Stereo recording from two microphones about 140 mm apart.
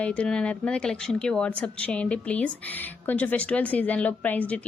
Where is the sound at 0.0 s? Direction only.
10° left (ahead or behind).